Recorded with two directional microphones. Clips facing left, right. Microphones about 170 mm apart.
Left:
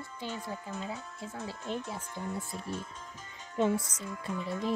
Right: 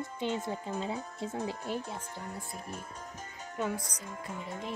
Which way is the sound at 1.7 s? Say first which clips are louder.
Left 2 dB; 10° right (ahead or behind).